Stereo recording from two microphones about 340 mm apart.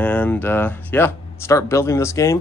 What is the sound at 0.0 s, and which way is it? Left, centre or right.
Speech, centre.